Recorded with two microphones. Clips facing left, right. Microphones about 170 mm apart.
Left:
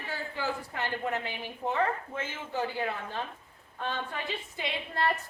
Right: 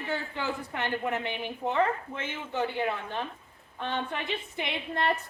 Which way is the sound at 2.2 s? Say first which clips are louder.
Right 3 dB; 65° right (ahead or behind).